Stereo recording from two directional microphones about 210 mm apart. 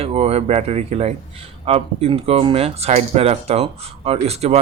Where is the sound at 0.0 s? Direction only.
30° right (ahead or behind).